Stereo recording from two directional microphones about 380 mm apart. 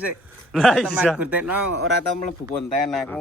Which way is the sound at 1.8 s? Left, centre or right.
Left.